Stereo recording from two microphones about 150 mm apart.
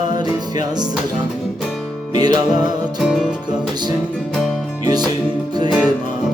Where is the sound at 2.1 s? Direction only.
25° right (ahead or behind).